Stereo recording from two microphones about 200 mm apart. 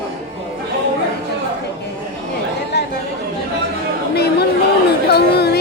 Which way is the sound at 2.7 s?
55° left (ahead or behind).